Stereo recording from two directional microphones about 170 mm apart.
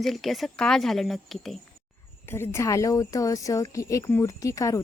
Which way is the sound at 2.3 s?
15° left (ahead or behind).